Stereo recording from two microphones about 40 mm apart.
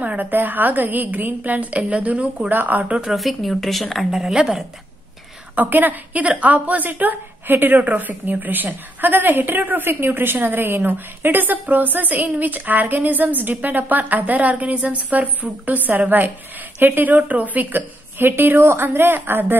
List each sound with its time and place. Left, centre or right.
0.0 s a woman's voice: right
0.3 s a woman's voice: right
2.5 s a woman's voice: right
3.2 s a woman's voice: centre
5.6 s a woman's voice: right
6.2 s a woman's voice: right
6.9 s a woman's voice: right
9.8 s a woman's voice: right
16.8 s a woman's voice: right
17.1 s a woman's voice: right
17.7 s a woman's voice: right